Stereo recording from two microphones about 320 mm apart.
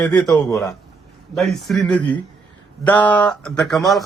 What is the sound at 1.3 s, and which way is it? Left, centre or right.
A man's voice, centre.